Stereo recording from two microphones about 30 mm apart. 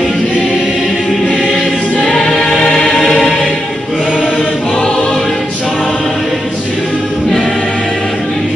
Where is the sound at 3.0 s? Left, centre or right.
Centre.